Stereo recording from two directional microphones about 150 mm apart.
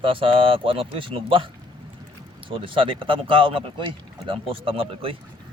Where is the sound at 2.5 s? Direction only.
35° right (ahead or behind).